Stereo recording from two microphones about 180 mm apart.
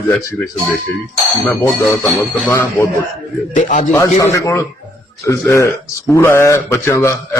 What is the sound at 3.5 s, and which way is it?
Speech, 45° left (ahead or behind).